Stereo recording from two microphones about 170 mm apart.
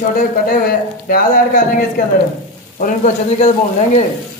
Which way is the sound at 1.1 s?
50° left (ahead or behind).